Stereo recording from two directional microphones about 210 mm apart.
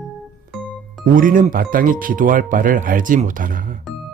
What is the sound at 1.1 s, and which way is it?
Speech, 40° right (ahead or behind).